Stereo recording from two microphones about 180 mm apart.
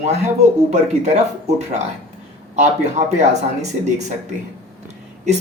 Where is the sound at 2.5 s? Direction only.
40° right (ahead or behind).